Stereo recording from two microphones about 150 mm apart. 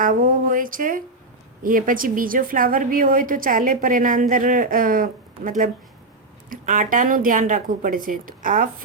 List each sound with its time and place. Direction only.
0.0 s a woman's voice: 65° right (ahead or behind)